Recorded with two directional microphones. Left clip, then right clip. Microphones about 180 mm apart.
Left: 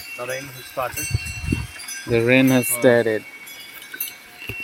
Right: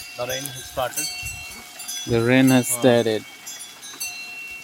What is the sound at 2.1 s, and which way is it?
Speech, 5° right (ahead or behind).